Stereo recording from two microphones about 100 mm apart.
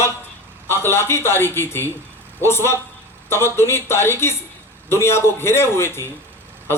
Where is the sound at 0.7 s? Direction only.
25° left (ahead or behind).